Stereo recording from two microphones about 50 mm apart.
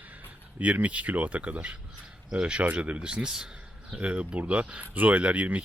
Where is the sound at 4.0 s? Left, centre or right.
Right.